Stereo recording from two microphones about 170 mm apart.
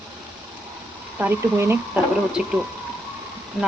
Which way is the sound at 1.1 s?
15° right (ahead or behind).